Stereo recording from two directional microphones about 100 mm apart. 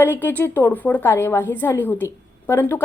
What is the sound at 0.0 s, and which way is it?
A woman's voice, 20° left (ahead or behind).